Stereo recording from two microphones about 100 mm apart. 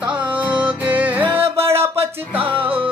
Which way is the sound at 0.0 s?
15° right (ahead or behind).